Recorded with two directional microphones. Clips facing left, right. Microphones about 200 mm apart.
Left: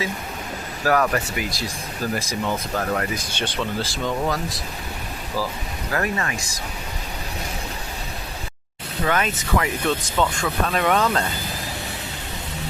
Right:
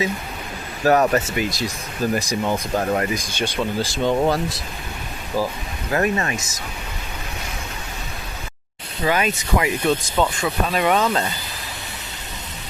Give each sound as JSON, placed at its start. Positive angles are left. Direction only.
{"t": 0.9, "sound": "speech", "side_deg": -25}
{"t": 3.3, "sound": "speech", "side_deg": -10}
{"t": 4.0, "sound": "speech", "side_deg": -25}
{"t": 5.9, "sound": "speech", "side_deg": -25}
{"t": 9.0, "sound": "speech", "side_deg": -10}